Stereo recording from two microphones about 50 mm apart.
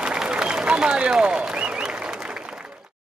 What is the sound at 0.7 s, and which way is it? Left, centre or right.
Run, right.